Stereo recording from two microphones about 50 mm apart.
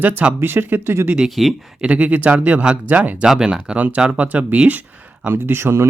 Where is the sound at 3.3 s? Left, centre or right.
Centre.